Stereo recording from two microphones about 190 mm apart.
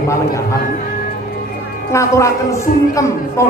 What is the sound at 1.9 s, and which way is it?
A man's voice, 15° left (ahead or behind).